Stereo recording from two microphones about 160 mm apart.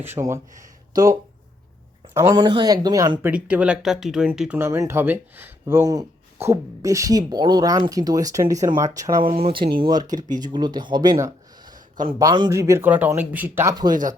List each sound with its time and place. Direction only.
0.0 s speech: 15° right (ahead or behind)
2.1 s speech: 20° right (ahead or behind)
3.3 s speech: 10° right (ahead or behind)
9.2 s speech: 35° right (ahead or behind); by 13.7 s 10° right (ahead or behind)
13.9 s speech: 55° right (ahead or behind)